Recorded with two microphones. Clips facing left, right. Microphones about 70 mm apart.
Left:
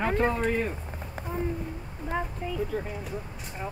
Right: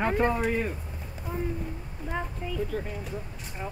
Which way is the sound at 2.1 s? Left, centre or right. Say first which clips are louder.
Left 2 dB; centre.